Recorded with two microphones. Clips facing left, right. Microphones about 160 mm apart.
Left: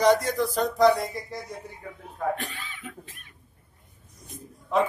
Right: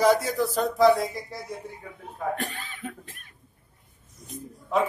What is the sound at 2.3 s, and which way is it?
Cough, 50° right (ahead or behind).